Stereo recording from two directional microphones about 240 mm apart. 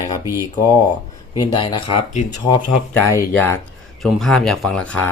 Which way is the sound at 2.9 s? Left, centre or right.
Centre.